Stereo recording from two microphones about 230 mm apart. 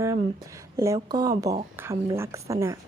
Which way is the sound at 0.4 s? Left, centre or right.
Centre.